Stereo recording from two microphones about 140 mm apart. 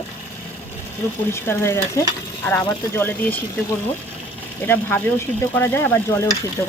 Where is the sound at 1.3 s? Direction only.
15° left (ahead or behind).